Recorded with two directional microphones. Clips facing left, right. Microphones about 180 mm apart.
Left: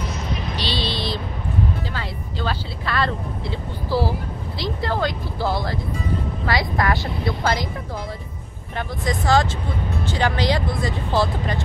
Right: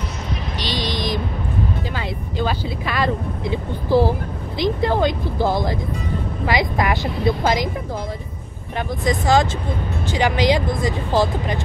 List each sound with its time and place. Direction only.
0.6 s vehicle: 15° right (ahead or behind)
2.0 s speech: 15° right (ahead or behind)
8.7 s speech: 15° right (ahead or behind)